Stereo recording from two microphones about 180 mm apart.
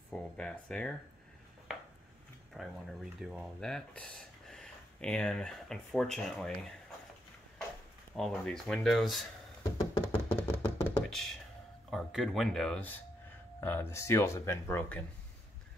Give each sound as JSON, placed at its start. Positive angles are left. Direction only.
{"t": 0.1, "sound": "speech", "side_deg": 5}
{"t": 1.7, "sound": "a sound", "side_deg": 0}
{"t": 2.5, "sound": "speech", "side_deg": 0}
{"t": 8.2, "sound": "speech", "side_deg": 5}
{"t": 9.6, "sound": "knock", "side_deg": 20}
{"t": 11.9, "sound": "speech", "side_deg": 0}